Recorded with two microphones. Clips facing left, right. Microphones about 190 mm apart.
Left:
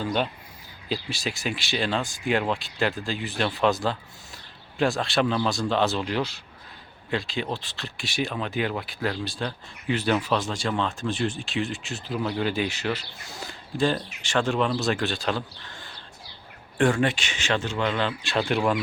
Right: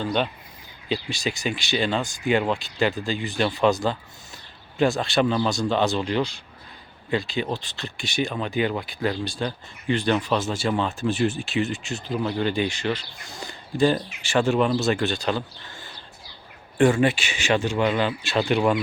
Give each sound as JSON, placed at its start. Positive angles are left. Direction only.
{"t": 0.0, "sound": "speech", "side_deg": 5}